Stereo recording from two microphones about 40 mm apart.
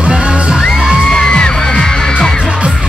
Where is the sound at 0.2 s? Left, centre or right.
Centre.